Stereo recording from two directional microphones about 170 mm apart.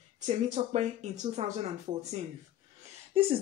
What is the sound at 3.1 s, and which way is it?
Speech, 30° right (ahead or behind).